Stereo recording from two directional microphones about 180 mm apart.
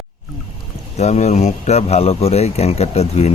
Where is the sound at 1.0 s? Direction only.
40° left (ahead or behind).